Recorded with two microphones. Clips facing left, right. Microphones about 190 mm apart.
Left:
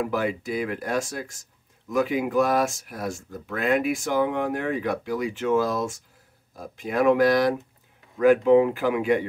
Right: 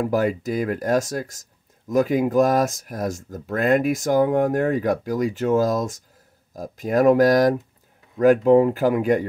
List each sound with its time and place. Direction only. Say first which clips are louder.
0.0 s speech: right 5 dB; 40° right (ahead or behind)